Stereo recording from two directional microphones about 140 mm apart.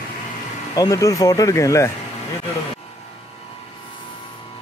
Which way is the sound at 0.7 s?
25° left (ahead or behind).